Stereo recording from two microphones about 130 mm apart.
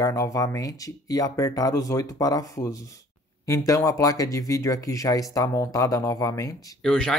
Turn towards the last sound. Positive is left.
turn(degrees=10)  # may be behind; listen again after turning